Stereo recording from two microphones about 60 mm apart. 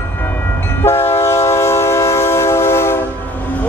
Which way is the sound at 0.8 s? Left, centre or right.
Left.